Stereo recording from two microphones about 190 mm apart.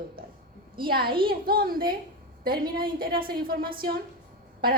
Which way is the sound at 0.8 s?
55° right (ahead or behind).